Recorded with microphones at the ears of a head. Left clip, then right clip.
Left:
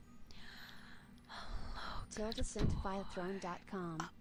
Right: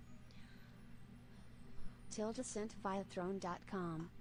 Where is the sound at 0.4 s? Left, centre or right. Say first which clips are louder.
Left 10 dB; left.